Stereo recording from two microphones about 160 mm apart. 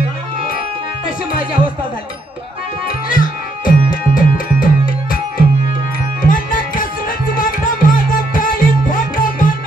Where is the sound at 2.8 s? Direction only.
60° left (ahead or behind).